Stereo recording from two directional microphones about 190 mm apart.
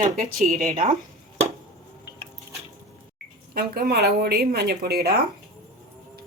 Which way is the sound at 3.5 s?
55° right (ahead or behind).